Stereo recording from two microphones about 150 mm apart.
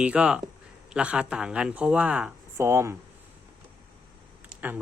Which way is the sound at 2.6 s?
20° right (ahead or behind).